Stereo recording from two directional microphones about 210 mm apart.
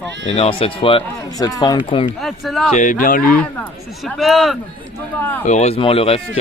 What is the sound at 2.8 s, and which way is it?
Speech, 40° left (ahead or behind).